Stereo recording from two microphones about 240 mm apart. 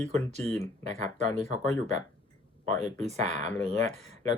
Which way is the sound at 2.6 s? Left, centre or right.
Right.